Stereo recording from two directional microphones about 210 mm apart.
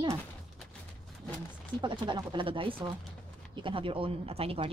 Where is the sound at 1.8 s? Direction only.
20° right (ahead or behind).